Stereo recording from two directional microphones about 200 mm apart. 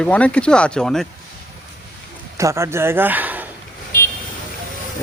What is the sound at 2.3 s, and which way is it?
Speech, 15° right (ahead or behind).